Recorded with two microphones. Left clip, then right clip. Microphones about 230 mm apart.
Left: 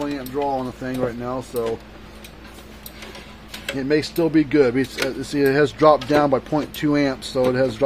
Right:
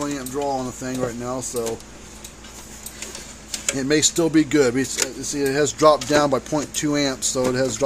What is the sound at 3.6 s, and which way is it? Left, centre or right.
Speech, centre.